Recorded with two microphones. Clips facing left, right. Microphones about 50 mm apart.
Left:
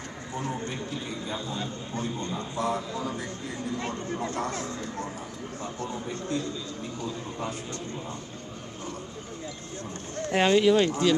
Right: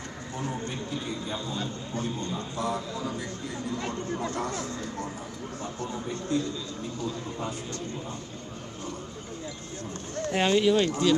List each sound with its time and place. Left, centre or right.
1.3 s a man's voice: left
10.2 s speech: left